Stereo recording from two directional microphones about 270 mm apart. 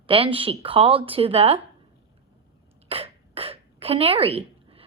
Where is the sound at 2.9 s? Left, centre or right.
Right.